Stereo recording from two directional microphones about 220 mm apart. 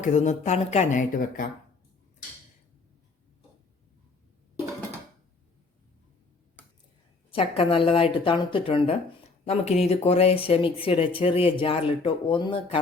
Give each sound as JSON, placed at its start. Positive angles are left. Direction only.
{"t": 0.0, "sound": "speech", "side_deg": 35}
{"t": 7.3, "sound": "speech", "side_deg": 25}